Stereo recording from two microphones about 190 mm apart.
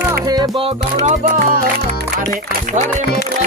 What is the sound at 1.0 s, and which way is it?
Speech, 40° right (ahead or behind).